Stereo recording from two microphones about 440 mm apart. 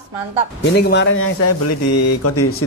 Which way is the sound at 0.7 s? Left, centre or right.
Left.